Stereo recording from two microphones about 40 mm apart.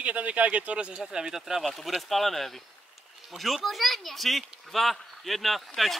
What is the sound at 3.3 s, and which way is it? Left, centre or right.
Speech, right.